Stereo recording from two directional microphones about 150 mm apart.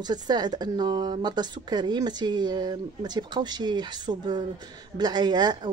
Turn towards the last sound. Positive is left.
turn(degrees=-30)  # may be behind; listen again after turning